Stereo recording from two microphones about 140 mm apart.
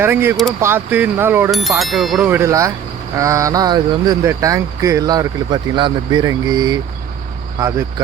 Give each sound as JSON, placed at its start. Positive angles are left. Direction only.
{"t": 0.0, "sound": "speech", "side_deg": -15}
{"t": 1.5, "sound": "speech", "side_deg": 0}
{"t": 2.3, "sound": "speech", "side_deg": -20}